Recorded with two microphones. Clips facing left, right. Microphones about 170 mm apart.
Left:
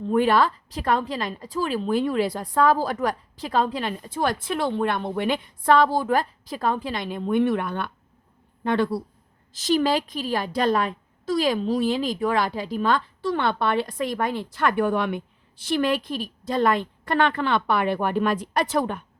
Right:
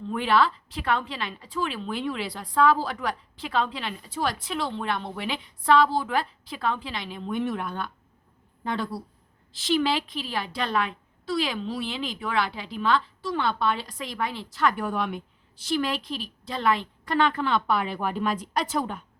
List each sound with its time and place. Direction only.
0.1 s a woman's voice: 45° left (ahead or behind); by 9.0 s 65° left (ahead or behind)
9.5 s a woman's voice: 45° left (ahead or behind); by 19.0 s 65° left (ahead or behind)